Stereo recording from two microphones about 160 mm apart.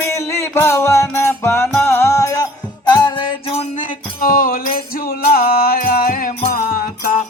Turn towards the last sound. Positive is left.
turn(degrees=60)  # may be behind; listen again after turning